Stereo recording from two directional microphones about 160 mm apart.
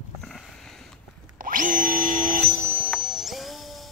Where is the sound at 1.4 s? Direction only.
55° right (ahead or behind).